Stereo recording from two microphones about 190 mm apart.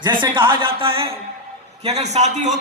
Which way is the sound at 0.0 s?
25° right (ahead or behind).